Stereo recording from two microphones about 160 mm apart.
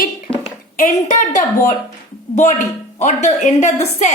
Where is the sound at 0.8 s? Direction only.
50° left (ahead or behind).